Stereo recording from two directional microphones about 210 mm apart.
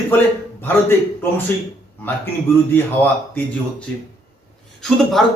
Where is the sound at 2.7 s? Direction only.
10° left (ahead or behind).